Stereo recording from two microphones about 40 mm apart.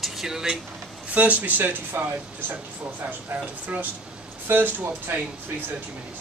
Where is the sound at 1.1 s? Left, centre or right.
Right.